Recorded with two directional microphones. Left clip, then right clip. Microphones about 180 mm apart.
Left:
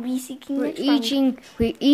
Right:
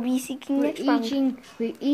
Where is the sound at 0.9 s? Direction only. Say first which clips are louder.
Left 3 dB; 55° left (ahead or behind).